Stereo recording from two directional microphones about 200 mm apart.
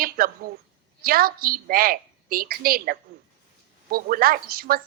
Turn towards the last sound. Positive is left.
turn(degrees=-50)  # may be behind; listen again after turning